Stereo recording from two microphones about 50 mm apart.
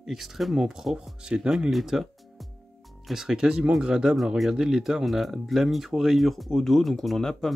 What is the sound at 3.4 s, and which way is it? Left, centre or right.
Speech, right.